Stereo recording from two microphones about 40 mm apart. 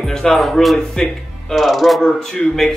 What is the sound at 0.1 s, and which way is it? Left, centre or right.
Speech, centre.